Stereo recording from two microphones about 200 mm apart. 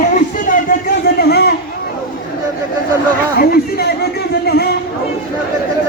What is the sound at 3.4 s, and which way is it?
A man's voice, 50° left (ahead or behind).